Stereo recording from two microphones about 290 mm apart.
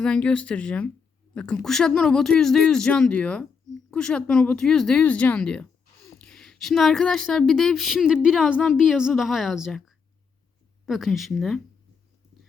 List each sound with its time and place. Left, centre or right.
0.0 s speech: centre